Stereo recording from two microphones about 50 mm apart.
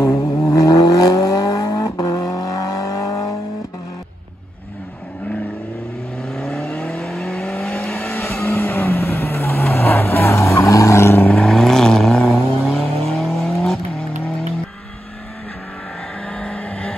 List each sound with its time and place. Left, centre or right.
0.0 s vehicle: left
6.3 s vehicle: centre
8.4 s vehicle: left
11.2 s vehicle: centre
16.3 s vehicle: centre